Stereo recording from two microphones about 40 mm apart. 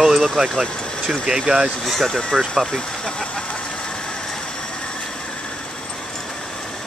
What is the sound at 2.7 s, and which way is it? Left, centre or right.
Speech, centre.